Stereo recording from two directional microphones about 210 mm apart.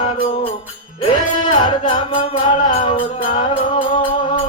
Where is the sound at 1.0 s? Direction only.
25° left (ahead or behind).